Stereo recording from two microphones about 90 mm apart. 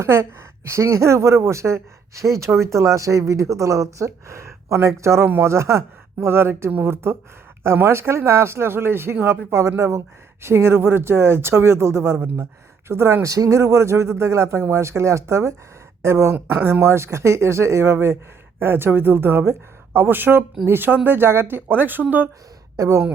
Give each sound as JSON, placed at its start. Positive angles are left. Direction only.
{"t": 0.0, "sound": "a woman's voice", "side_deg": -25}